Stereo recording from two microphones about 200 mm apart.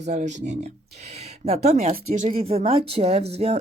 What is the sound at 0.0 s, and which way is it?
Speech, 35° right (ahead or behind).